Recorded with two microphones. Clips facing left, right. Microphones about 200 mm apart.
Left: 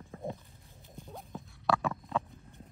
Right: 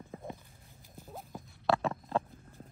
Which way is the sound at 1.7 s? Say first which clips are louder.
Right 1 dB; 30° right (ahead or behind).